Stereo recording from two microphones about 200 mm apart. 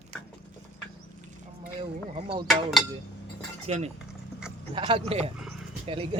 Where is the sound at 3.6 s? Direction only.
35° right (ahead or behind).